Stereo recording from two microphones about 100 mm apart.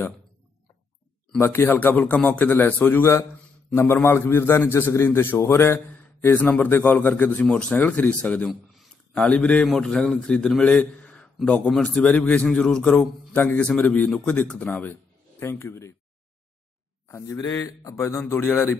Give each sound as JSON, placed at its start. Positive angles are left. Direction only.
{"t": 1.4, "sound": "a man's voice", "side_deg": 20}
{"t": 17.1, "sound": "a man's voice", "side_deg": 35}
{"t": 18.0, "sound": "a man's voice", "side_deg": 20}